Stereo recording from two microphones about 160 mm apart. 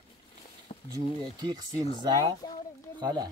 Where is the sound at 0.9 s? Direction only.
25° right (ahead or behind).